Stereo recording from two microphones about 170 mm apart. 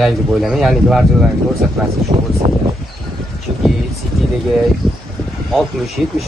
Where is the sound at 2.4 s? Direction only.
35° right (ahead or behind).